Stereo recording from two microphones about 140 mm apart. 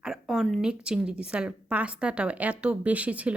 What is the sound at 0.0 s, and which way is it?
A woman's voice, centre (ahead or behind).